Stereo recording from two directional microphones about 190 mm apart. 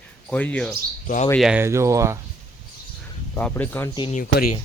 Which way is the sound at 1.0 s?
40° left (ahead or behind).